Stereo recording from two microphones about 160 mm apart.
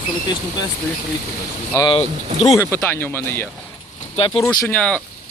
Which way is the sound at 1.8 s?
35° left (ahead or behind).